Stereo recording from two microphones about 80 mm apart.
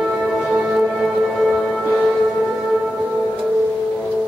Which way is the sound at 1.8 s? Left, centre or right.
Centre.